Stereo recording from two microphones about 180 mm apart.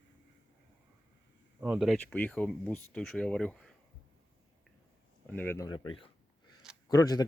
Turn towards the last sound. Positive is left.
turn(degrees=20)  # may be behind; listen again after turning